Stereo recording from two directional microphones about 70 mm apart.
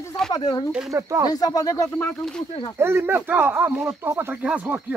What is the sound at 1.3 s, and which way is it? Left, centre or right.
Speech, left.